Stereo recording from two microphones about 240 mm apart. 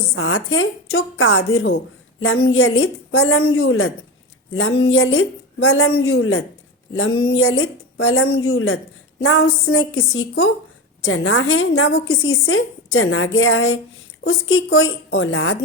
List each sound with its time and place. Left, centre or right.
0.1 s a woman's voice: left